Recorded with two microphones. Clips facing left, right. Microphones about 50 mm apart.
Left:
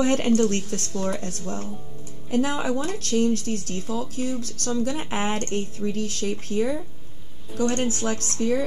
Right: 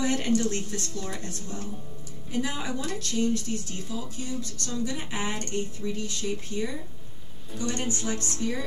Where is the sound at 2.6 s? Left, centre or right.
Left.